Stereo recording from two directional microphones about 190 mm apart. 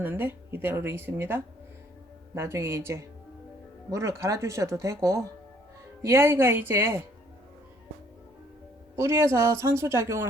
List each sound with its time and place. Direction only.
0.0 s speech: 10° right (ahead or behind)
9.0 s speech: 15° right (ahead or behind)